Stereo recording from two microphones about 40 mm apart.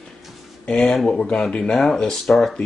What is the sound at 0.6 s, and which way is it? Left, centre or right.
Speech, left.